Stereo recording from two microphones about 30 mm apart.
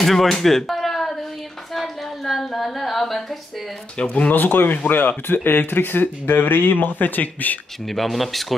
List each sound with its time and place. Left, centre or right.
0.0 s speech: centre
0.4 s a sound: centre
4.3 s speech: left
7.9 s speech: centre